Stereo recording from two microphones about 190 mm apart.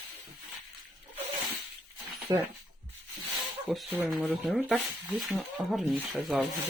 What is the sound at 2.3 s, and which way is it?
Speech, 20° right (ahead or behind).